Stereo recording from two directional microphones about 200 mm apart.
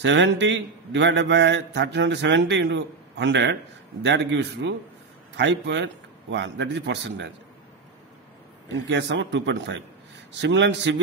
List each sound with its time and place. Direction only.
0.0 s mantra: 60° right (ahead or behind)
8.8 s mantra: 60° right (ahead or behind)